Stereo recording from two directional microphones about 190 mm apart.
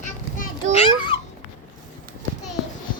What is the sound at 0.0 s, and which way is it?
Children playing, 40° left (ahead or behind).